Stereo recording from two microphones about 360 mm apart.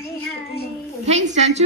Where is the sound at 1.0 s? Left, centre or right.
Centre.